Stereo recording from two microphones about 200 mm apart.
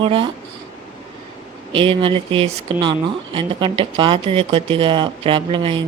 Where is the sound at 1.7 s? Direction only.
25° right (ahead or behind).